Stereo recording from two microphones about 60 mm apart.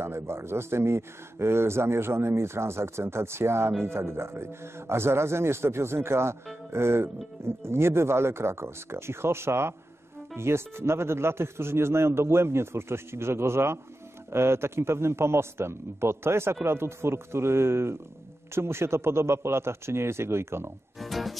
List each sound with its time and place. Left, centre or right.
0.0 s speech: right
21.0 s music: centre